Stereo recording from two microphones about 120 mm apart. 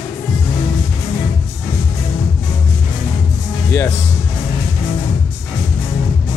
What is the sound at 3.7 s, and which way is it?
Speech, 20° left (ahead or behind).